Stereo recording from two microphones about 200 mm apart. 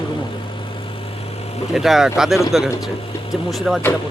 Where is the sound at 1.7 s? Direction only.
Centre (ahead or behind).